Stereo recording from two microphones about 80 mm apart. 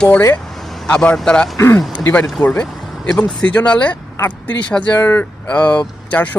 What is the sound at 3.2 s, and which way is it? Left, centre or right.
Speech, centre.